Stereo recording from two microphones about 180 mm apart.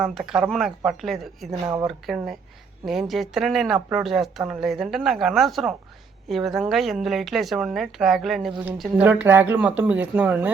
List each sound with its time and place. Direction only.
0.0 s speech: centre (ahead or behind)
1.6 s speech: 20° right (ahead or behind)
1.9 s speech: centre (ahead or behind)